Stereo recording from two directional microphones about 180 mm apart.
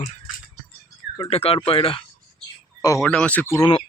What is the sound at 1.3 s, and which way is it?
Speech, 35° left (ahead or behind).